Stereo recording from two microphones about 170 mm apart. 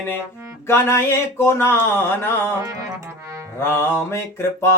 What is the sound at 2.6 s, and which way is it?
Speech, 20° right (ahead or behind).